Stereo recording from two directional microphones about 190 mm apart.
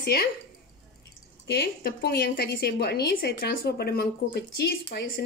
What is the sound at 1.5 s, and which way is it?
Speech, 55° left (ahead or behind).